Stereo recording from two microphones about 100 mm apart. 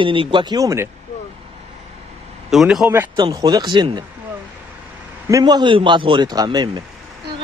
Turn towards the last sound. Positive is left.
turn(degrees=-45)  # may be behind; listen again after turning